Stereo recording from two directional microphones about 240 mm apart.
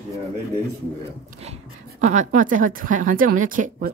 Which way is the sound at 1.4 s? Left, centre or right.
Right.